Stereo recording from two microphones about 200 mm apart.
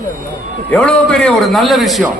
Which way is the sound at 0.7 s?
5° left (ahead or behind).